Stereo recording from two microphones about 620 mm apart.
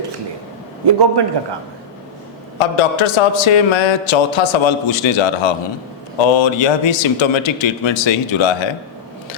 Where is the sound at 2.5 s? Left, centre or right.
Left.